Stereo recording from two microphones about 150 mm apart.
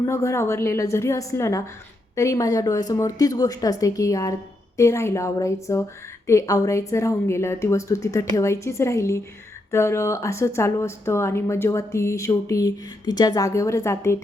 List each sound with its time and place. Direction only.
0.0 s speech: 20° left (ahead or behind)